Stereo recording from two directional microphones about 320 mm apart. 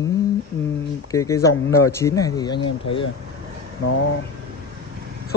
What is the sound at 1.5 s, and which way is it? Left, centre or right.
Speech, left.